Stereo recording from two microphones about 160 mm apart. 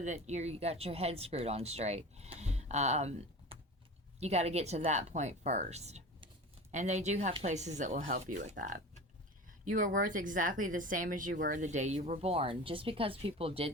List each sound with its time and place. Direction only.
0.0 s speech: 45° right (ahead or behind)